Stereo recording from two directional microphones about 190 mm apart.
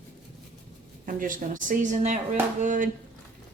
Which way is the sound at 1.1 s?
45° right (ahead or behind).